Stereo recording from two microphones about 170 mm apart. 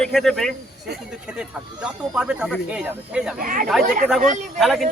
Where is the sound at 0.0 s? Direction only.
Centre (ahead or behind).